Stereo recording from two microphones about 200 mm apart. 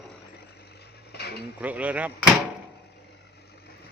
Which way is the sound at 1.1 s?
55° left (ahead or behind).